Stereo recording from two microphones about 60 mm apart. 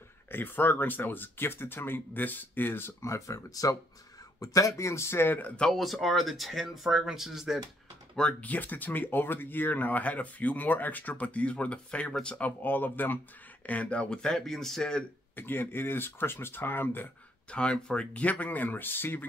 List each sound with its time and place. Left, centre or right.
0.3 s speech: left
3.0 s speech: left
4.4 s speech: left
5.7 s speech: centre
8.2 s speech: left
12.4 s speech: left; by 15.0 s centre
15.3 s speech: left
17.5 s speech: centre; by 19.2 s left